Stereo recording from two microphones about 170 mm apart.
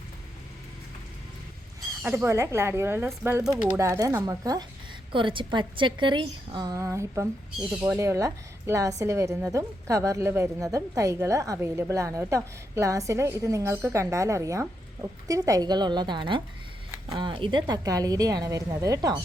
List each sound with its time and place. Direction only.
2.0 s a woman's voice: 15° right (ahead or behind)